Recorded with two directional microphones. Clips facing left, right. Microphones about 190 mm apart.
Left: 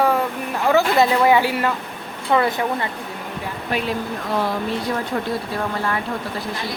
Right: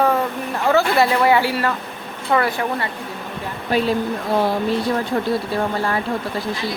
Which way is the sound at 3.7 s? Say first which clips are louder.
Right 5 dB; 30° right (ahead or behind).